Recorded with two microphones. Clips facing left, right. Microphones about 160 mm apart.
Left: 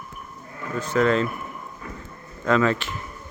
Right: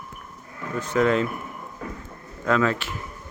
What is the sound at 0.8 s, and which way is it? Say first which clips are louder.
Speech: even; 15° right (ahead or behind).